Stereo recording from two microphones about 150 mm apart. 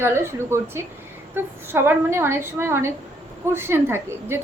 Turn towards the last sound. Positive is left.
turn(degrees=-15)  # may be behind; listen again after turning